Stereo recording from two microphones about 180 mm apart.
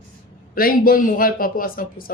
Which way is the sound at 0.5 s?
55° left (ahead or behind).